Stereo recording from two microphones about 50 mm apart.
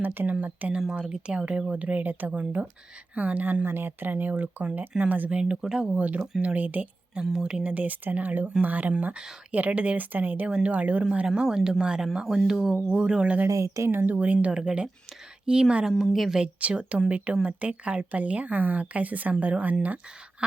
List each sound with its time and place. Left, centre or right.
0.0 s speech: right
0.8 s speech: centre; by 3.6 s right
3.6 s speech: right
5.3 s speech: right
6.0 s a woman's voice: right
13.6 s speech: right
13.9 s speech: right
14.4 s speech: centre
16.6 s speech: right